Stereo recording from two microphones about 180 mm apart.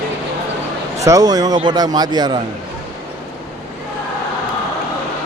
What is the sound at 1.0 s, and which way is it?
Speech, 20° right (ahead or behind).